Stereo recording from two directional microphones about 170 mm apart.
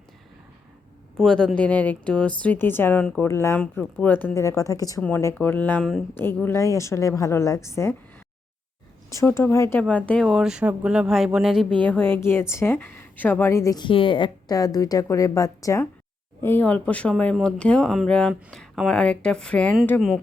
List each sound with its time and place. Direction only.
1.2 s a woman's voice: 5° left (ahead or behind)
9.1 s a woman's voice: 15° left (ahead or behind); by 11.7 s centre (ahead or behind)
11.8 s a woman's voice: 10° left (ahead or behind)